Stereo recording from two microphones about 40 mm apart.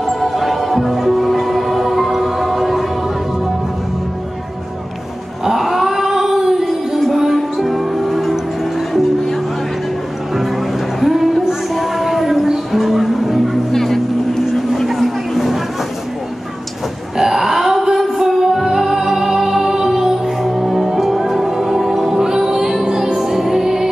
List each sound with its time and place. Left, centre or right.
0.0 s music: centre
5.4 s a sound: centre
7.0 s music: centre
11.0 s a sound: centre
12.7 s music: centre
13.7 s vehicle: centre
14.5 s a sound: centre
17.2 s music: centre
22.1 s music: centre